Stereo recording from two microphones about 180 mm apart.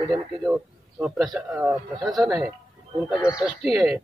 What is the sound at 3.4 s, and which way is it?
Speech, centre (ahead or behind).